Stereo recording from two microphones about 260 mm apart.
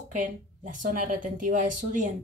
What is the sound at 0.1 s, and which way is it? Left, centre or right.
Speech, right.